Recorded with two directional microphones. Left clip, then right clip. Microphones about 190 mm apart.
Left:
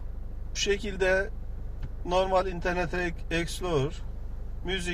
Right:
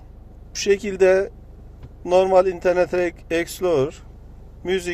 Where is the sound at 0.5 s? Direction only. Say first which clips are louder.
Right 8 dB; 60° right (ahead or behind).